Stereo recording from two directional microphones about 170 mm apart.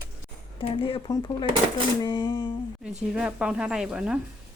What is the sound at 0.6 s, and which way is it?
Speech, 30° left (ahead or behind).